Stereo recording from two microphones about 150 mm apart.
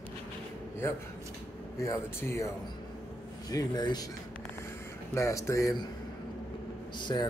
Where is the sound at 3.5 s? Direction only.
25° left (ahead or behind).